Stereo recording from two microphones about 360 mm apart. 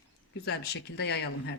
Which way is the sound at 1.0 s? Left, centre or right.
Left.